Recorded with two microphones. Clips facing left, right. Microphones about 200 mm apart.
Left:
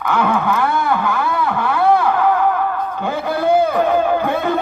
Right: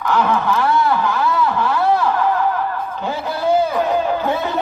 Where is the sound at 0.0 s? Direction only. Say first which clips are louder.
Even; 55° left (ahead or behind).